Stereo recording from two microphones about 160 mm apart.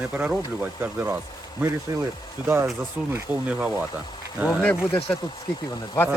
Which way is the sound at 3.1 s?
10° right (ahead or behind).